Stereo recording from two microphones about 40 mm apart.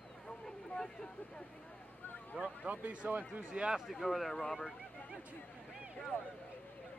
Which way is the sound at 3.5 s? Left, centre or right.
Right.